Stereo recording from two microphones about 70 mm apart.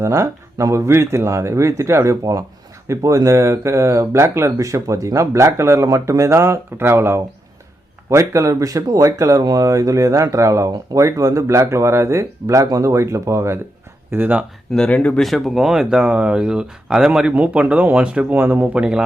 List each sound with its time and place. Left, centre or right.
0.0 s speech: right
9.4 s speech: right
14.1 s speech: right
14.8 s speech: centre
15.2 s speech: centre
17.3 s speech: right
18.3 s speech: right
18.7 s speech: centre